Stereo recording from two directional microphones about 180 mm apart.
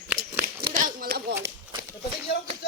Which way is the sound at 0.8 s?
55° right (ahead or behind).